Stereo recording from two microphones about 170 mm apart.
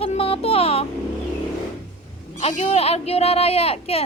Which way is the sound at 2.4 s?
45° left (ahead or behind).